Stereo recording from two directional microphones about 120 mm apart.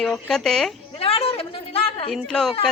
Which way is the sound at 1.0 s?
55° left (ahead or behind).